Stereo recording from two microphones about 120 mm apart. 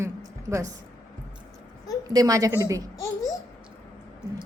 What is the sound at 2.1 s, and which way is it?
Speech, 30° right (ahead or behind).